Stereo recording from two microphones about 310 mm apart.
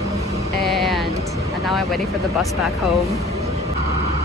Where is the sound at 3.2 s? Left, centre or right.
Centre.